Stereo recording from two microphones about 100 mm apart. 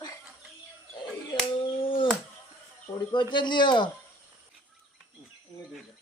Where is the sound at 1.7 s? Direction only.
60° left (ahead or behind).